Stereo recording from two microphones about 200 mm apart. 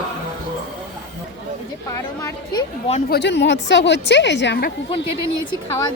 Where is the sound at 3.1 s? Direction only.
60° left (ahead or behind).